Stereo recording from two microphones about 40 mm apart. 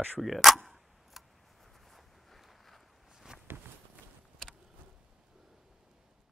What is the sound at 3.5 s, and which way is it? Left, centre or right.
Walk, right.